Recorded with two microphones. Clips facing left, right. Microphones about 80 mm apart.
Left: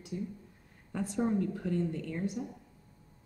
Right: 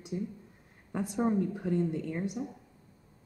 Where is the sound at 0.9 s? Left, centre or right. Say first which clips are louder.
Right 2 dB; centre.